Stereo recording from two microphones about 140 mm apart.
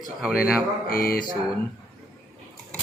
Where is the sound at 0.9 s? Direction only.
90° left.